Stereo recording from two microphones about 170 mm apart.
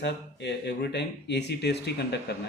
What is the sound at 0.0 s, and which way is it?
A man's voice, 80° left.